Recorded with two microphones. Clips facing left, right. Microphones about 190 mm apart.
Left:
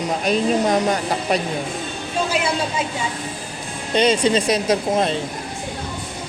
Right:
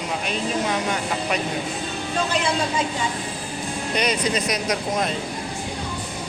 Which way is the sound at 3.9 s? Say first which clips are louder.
Left 7 dB; 30° left (ahead or behind).